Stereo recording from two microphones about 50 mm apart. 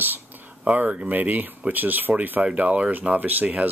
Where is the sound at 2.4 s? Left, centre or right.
Right.